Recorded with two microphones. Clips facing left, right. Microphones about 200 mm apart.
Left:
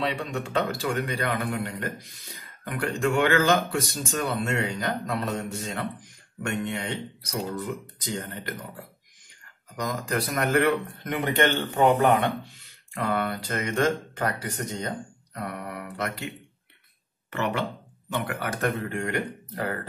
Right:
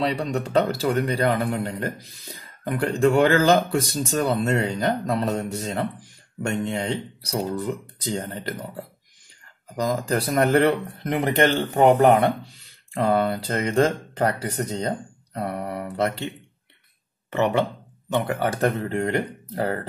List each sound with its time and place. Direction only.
0.0 s speech: 40° right (ahead or behind)
9.8 s speech: 30° right (ahead or behind)
11.6 s speech: 45° right (ahead or behind)
17.3 s speech: 20° right (ahead or behind)